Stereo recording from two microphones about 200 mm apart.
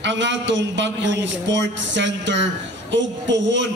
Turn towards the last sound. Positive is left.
turn(degrees=-65)  # may be behind; listen again after turning